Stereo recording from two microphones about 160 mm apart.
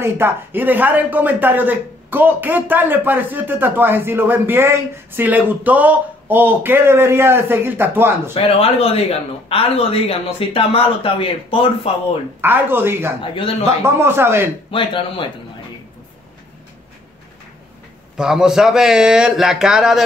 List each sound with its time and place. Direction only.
0.0 s speech: 15° right (ahead or behind)
8.5 s speech: 35° left (ahead or behind)
12.4 s speech: 15° right (ahead or behind)
14.7 s speech: 30° left (ahead or behind)
18.1 s a man's voice: 5° right (ahead or behind)